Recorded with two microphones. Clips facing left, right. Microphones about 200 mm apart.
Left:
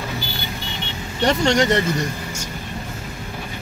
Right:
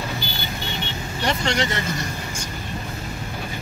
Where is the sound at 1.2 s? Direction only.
40° left (ahead or behind).